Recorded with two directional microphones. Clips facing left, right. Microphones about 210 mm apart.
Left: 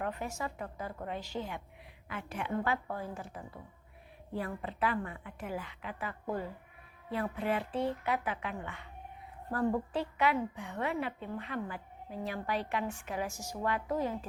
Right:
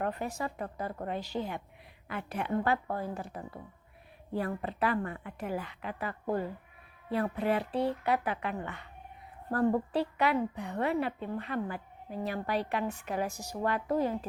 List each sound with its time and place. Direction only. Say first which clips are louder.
0.0 s a woman's voice: right 3 dB; 35° right (ahead or behind)